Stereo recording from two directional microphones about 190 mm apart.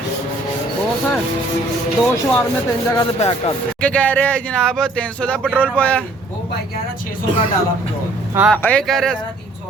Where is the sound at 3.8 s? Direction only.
5° left (ahead or behind).